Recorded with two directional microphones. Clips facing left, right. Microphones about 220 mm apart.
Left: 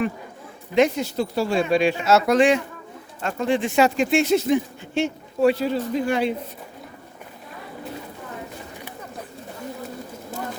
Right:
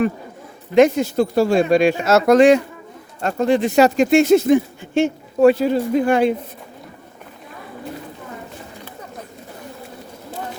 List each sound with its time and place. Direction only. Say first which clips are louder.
0.8 s speech: right 6 dB; 50° right (ahead or behind)